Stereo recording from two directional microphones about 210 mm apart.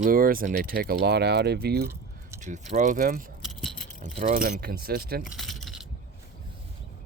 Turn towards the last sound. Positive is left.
turn(degrees=0)  # may be behind; listen again after turning